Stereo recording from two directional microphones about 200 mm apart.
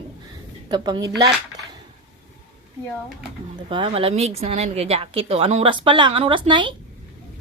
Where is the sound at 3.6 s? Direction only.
25° right (ahead or behind).